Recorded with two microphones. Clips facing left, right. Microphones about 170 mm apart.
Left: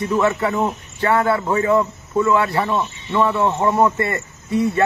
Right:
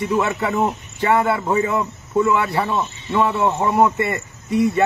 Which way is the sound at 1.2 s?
15° right (ahead or behind).